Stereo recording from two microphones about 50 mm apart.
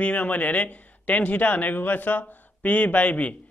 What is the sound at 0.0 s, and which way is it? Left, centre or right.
A man's voice, left.